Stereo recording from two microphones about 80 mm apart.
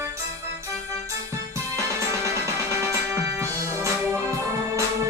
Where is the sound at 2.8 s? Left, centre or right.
Right.